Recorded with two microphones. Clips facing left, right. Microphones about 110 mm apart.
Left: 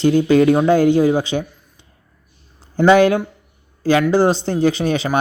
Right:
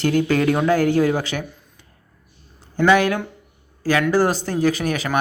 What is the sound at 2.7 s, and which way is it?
Speech, 30° left (ahead or behind).